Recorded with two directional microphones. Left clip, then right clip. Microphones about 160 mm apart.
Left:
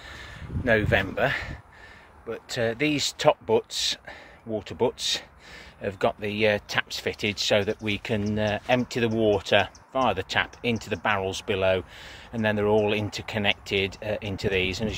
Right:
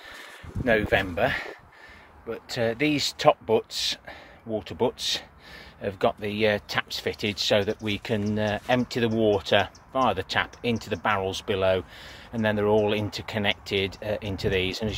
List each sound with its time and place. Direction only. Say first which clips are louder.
0.1 s speech: left 1 dB; 10° left (ahead or behind)